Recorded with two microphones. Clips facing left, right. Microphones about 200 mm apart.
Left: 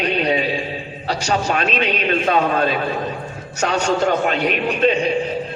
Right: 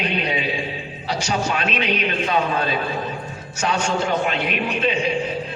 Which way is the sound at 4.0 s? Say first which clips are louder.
Left 4 dB; 40° left (ahead or behind).